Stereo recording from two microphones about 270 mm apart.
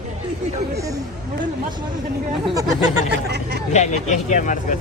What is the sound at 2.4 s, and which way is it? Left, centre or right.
Speech, centre.